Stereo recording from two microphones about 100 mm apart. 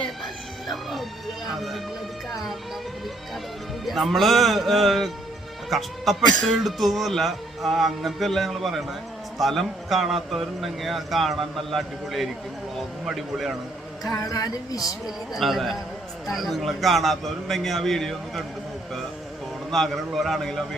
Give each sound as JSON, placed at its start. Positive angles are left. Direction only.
{"t": 0.7, "sound": "music", "side_deg": 0}
{"t": 1.5, "sound": "speech", "side_deg": 0}
{"t": 3.8, "sound": "speech", "side_deg": 0}
{"t": 14.1, "sound": "a woman's voice", "side_deg": 35}
{"t": 15.0, "sound": "speech", "side_deg": 0}
{"t": 19.7, "sound": "speech", "side_deg": 0}